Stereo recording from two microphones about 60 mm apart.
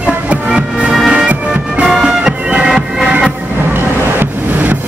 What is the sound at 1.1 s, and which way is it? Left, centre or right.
Bagpipes, centre.